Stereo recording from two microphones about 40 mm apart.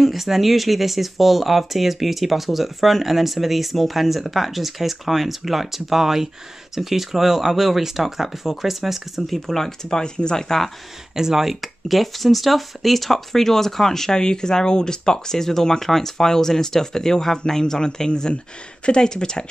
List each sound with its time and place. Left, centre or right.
0.0 s speech: centre
11.1 s speech: centre